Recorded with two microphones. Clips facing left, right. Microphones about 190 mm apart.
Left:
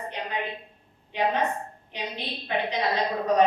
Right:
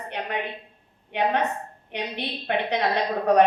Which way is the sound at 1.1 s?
65° right (ahead or behind).